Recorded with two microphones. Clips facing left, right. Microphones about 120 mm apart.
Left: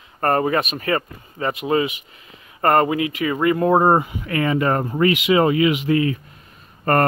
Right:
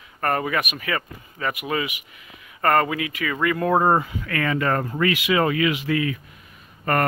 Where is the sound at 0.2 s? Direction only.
35° left (ahead or behind).